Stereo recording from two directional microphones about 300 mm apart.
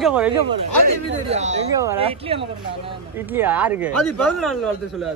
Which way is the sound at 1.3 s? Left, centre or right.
Right.